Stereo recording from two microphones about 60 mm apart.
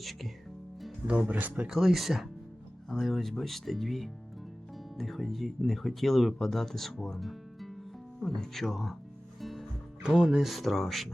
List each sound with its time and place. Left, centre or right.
0.0 s speech: centre
1.0 s speech: right
1.6 s speech: centre
9.4 s music: centre
10.1 s speech: centre